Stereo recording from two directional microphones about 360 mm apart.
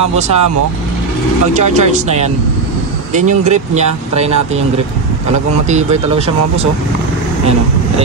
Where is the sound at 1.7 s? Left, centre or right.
Centre.